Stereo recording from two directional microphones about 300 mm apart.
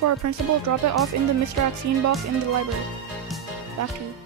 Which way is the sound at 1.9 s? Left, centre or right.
Right.